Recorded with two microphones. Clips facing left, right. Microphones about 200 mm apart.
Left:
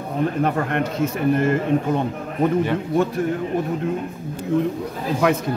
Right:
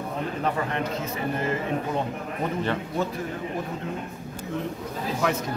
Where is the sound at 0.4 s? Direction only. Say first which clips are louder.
Left 6 dB; 60° left (ahead or behind).